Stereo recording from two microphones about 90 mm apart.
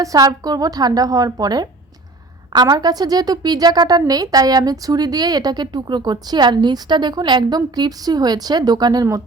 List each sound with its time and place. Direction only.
0.0 s a woman's voice: 45° right (ahead or behind)